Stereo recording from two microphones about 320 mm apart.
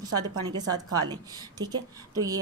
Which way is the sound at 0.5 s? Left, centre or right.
Centre.